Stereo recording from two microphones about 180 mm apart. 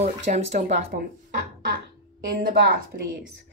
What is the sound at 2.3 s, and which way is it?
Speech, 55° right (ahead or behind).